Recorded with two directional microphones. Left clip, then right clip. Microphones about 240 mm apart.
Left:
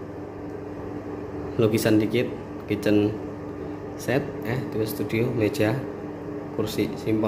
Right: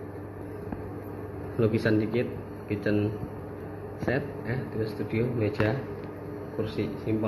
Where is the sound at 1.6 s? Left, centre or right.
Centre.